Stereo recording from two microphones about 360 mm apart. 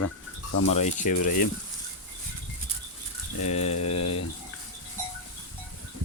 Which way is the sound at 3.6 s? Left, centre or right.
Left.